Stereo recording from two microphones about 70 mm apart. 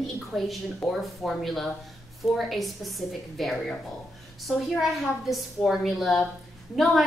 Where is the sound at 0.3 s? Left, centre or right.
Centre.